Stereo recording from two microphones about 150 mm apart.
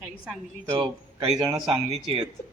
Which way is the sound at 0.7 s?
35° right (ahead or behind).